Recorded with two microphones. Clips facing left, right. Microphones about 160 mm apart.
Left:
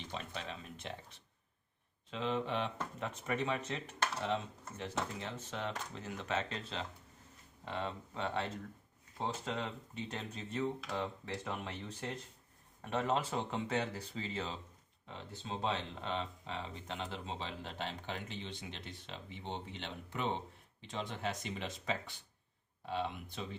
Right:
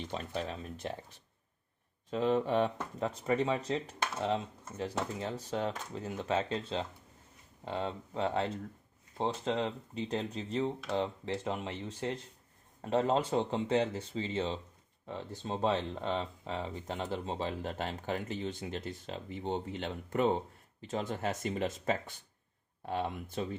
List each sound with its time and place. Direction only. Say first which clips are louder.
0.1 s speech: right 5 dB; 40° right (ahead or behind)
2.0 s speech: right 7 dB; 45° right (ahead or behind); by 14.6 s 25° right (ahead or behind)
15.0 s speech: right 7 dB; 45° right (ahead or behind)